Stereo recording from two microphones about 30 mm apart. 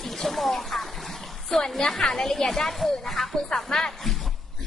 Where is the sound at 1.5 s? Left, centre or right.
Centre.